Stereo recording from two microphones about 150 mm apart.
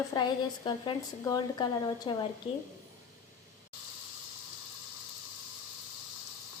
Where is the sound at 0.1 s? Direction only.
30° left (ahead or behind).